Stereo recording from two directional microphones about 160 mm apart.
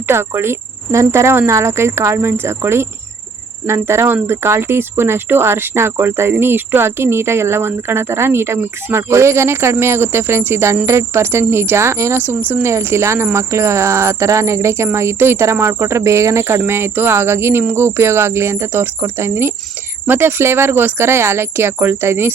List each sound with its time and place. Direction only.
0.1 s speech: 15° right (ahead or behind)